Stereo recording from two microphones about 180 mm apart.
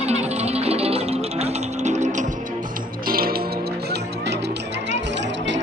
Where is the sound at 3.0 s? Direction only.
55° right (ahead or behind).